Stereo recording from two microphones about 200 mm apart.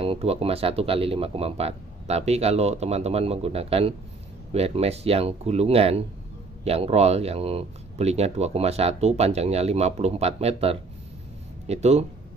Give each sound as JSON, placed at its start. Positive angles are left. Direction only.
{"t": 0.0, "sound": "speech", "side_deg": -30}